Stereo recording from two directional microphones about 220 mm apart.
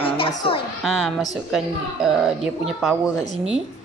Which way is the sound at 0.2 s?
20° left (ahead or behind).